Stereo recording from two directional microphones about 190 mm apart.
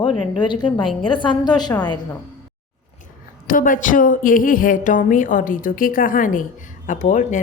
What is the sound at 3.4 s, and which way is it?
A woman's voice, 45° left (ahead or behind).